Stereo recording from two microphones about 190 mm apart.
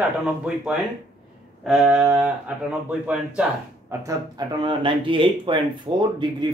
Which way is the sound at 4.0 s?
20° right (ahead or behind).